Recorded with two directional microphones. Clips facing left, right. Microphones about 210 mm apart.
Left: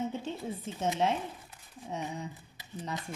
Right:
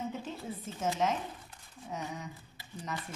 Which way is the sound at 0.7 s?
30° left (ahead or behind).